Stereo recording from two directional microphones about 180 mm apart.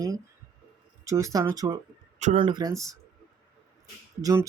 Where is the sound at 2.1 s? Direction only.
40° right (ahead or behind).